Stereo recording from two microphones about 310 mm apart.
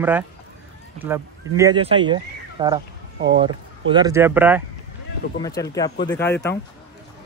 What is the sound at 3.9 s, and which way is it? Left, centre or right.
Speech, centre.